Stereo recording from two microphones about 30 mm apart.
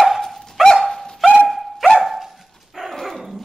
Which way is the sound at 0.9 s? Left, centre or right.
Centre.